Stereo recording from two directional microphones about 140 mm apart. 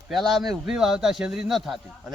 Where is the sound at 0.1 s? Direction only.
Centre (ahead or behind).